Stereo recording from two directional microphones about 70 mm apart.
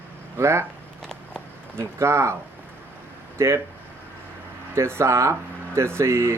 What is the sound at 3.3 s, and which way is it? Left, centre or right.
Speech, right.